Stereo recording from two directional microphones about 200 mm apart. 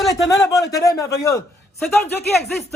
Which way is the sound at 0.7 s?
15° left (ahead or behind).